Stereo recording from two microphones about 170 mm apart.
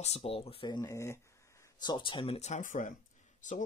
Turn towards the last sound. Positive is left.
turn(degrees=50)  # may be behind; listen again after turning